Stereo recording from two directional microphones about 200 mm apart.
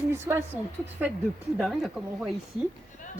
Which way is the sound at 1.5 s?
Centre (ahead or behind).